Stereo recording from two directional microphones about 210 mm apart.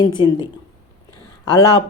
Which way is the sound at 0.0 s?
20° left (ahead or behind).